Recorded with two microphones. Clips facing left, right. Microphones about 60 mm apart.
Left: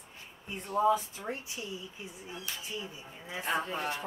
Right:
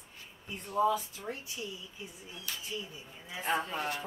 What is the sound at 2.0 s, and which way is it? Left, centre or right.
Speech, left.